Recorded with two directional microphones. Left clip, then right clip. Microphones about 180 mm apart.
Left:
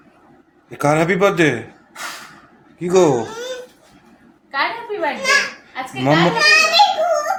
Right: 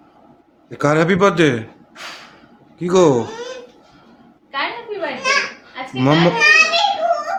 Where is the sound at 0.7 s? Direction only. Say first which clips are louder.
Even; 20° right (ahead or behind).